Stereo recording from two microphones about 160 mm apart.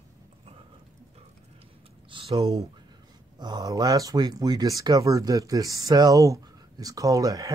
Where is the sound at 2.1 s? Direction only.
35° right (ahead or behind).